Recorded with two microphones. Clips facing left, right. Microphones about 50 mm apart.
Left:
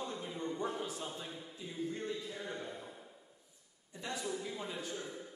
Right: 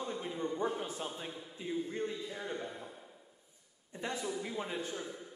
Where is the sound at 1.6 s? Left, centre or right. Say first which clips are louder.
Right 11 dB; right.